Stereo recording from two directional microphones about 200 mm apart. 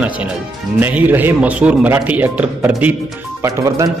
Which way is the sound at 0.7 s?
10° right (ahead or behind).